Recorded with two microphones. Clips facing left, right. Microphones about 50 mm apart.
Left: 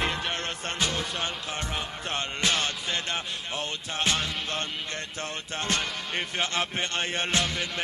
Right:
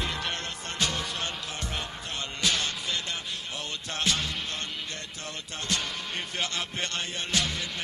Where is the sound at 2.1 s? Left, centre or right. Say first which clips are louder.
Left 3 dB; left.